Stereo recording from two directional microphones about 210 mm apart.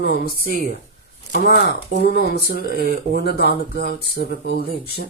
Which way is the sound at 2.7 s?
40° right (ahead or behind).